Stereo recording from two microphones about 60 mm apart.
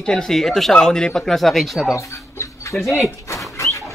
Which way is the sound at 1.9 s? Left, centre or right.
Left.